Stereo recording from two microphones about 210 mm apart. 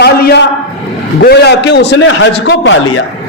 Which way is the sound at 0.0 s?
50° left (ahead or behind).